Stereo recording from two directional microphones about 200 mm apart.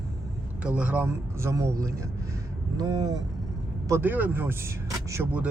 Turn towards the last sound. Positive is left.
turn(degrees=-10)  # may be behind; listen again after turning